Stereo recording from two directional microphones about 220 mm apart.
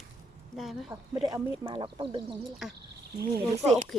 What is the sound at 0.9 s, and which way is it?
Speech, 15° right (ahead or behind).